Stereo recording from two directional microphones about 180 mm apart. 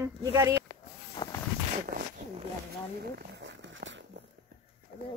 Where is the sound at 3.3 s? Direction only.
80° right.